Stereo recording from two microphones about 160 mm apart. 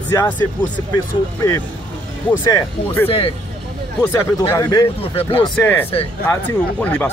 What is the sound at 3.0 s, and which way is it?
Speech, 35° left (ahead or behind).